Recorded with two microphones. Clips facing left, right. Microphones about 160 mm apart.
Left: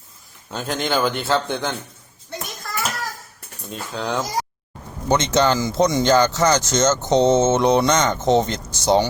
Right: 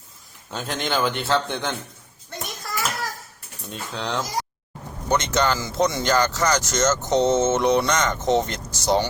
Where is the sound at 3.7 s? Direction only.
Centre (ahead or behind).